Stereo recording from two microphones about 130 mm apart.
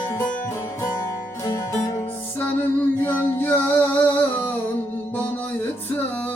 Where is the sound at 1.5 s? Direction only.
25° left (ahead or behind).